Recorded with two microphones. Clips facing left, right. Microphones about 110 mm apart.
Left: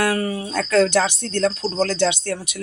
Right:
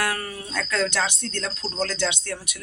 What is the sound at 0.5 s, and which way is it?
Speech, 40° left (ahead or behind).